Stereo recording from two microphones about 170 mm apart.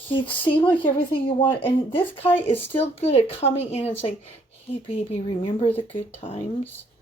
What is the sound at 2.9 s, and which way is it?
Speech, 35° left (ahead or behind).